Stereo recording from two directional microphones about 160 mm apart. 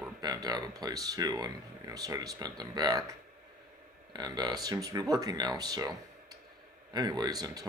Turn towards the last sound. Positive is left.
turn(degrees=-25)  # may be behind; listen again after turning